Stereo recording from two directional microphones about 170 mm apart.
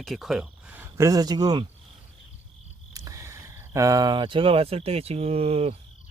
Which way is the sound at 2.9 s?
20° right (ahead or behind).